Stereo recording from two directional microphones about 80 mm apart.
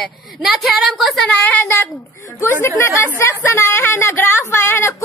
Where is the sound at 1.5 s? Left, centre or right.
Left.